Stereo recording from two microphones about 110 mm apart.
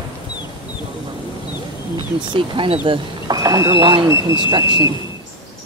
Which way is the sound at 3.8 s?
50° right (ahead or behind).